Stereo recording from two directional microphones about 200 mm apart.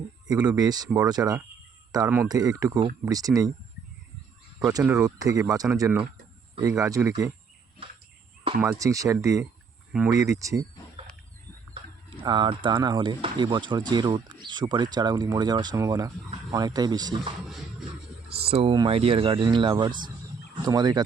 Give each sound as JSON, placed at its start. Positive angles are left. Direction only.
{"t": 0.3, "sound": "speech", "side_deg": -20}
{"t": 4.8, "sound": "speech", "side_deg": -5}
{"t": 5.0, "sound": "speech", "side_deg": -15}
{"t": 8.6, "sound": "speech", "side_deg": -15}
{"t": 11.7, "sound": "speech", "side_deg": -25}
{"t": 18.3, "sound": "speech", "side_deg": -30}